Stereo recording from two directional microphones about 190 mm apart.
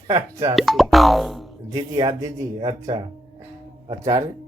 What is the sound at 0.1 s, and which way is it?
Speech, 20° right (ahead or behind).